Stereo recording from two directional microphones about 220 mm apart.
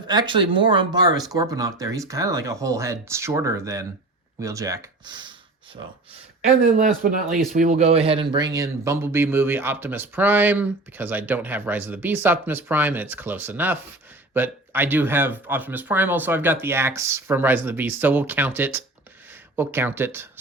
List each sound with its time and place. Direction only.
0.1 s speech: 20° right (ahead or behind)
6.7 s speech: 40° right (ahead or behind); by 20.4 s 10° right (ahead or behind)